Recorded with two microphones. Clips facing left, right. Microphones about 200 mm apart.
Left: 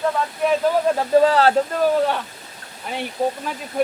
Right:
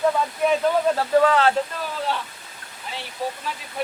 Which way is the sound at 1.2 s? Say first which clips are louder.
Left 4 dB; 35° left (ahead or behind).